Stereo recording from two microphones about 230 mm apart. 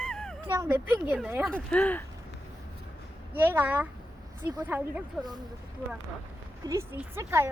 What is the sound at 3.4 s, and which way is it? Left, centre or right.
Speech, centre.